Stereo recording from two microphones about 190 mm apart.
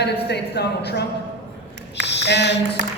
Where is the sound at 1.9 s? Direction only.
65° left (ahead or behind).